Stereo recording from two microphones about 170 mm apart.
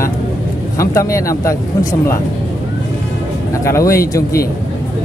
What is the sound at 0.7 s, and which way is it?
Speech, 15° left (ahead or behind).